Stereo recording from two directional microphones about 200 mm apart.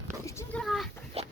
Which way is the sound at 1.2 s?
30° right (ahead or behind).